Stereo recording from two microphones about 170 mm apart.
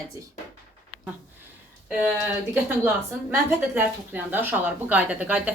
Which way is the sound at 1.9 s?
10° right (ahead or behind).